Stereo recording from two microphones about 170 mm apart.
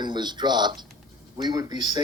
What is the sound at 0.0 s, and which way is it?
Speech, 25° right (ahead or behind).